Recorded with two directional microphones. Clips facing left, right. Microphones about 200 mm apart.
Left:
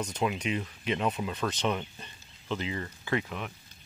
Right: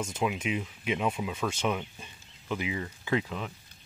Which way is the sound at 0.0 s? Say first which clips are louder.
Even; 5° right (ahead or behind).